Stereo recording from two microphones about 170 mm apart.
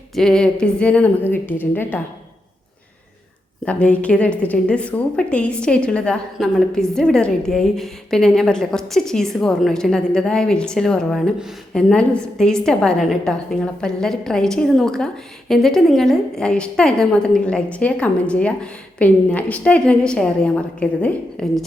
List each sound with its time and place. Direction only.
0.1 s a woman's voice: 5° left (ahead or behind)
3.7 s a woman's voice: 10° left (ahead or behind)